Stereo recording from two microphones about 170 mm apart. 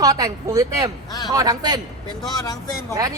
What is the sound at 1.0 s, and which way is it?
Speech, 20° left (ahead or behind).